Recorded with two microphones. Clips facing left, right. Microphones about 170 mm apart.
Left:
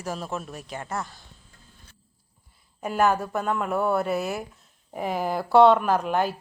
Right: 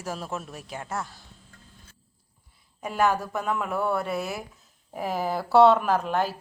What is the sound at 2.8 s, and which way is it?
Speech, centre (ahead or behind).